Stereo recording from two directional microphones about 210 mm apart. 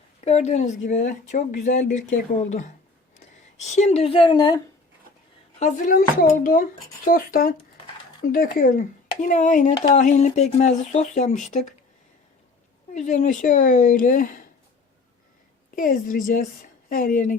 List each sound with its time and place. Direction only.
0.3 s speech: 30° left (ahead or behind)
5.5 s speech: 35° left (ahead or behind)
12.9 s speech: 35° left (ahead or behind)
15.7 s speech: 40° left (ahead or behind)